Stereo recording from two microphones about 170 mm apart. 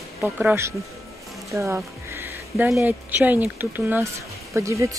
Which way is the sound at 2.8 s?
10° right (ahead or behind).